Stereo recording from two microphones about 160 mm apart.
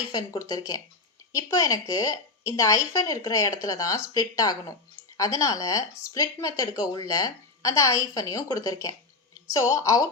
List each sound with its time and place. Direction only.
0.1 s speech: 25° left (ahead or behind)